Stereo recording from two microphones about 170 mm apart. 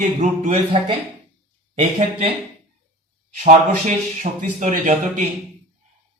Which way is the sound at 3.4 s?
50° right (ahead or behind).